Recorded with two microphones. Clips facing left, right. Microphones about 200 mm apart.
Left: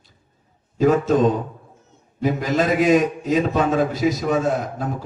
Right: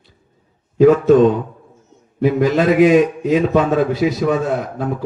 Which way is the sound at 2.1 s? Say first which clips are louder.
Right 6 dB; 55° right (ahead or behind).